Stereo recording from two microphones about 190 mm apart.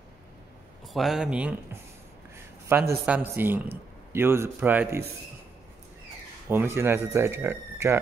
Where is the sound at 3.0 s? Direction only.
10° right (ahead or behind).